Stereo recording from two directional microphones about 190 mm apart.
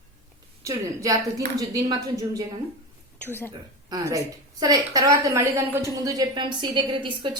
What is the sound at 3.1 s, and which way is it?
Speech, 10° left (ahead or behind).